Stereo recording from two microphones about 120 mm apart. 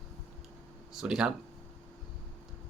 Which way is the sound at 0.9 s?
5° right (ahead or behind).